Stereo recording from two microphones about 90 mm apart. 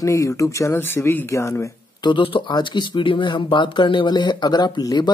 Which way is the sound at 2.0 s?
65° left (ahead or behind).